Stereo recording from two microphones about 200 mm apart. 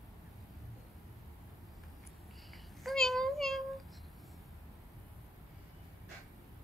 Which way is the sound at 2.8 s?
Centre (ahead or behind).